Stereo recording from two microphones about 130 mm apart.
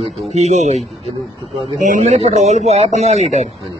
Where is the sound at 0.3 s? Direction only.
60° right (ahead or behind).